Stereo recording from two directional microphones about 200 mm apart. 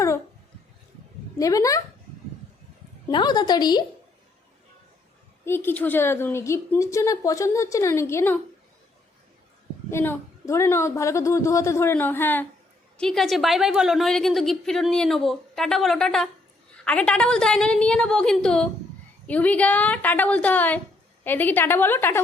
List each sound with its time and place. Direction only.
1.4 s a woman's voice: 15° left (ahead or behind)
3.1 s a woman's voice: 20° left (ahead or behind)
5.5 s a woman's voice: 10° left (ahead or behind)
9.9 s a woman's voice: 10° left (ahead or behind)